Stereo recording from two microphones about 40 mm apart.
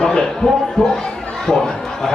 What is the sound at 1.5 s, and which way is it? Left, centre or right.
Speech, centre.